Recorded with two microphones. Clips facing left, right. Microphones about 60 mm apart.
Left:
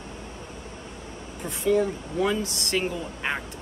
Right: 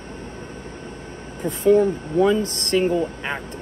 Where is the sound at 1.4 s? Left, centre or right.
Right.